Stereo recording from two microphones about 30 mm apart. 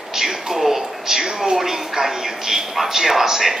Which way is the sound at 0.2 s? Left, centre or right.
Centre.